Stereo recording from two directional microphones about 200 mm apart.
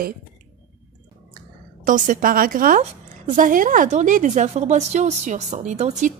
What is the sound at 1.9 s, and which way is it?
A woman's voice, 40° right (ahead or behind).